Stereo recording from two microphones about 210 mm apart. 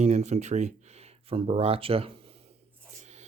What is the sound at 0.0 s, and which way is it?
Speech, 30° right (ahead or behind).